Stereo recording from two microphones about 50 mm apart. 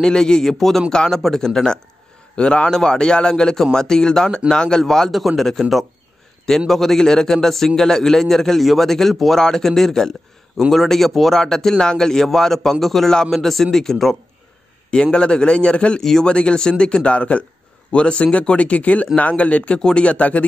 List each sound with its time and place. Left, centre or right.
0.0 s a man's voice: centre
5.1 s a man's voice: centre
14.9 s speech: centre
16.0 s a man's voice: centre
16.3 s speech: centre